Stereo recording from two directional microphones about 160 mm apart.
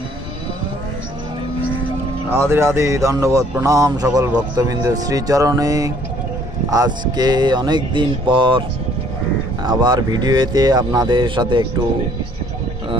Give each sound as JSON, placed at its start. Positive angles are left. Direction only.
{"t": 2.3, "sound": "speech", "side_deg": -15}